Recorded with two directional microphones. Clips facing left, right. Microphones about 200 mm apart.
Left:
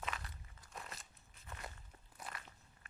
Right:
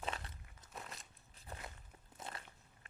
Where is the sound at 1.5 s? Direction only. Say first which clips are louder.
Right 1 dB; 35° right (ahead or behind).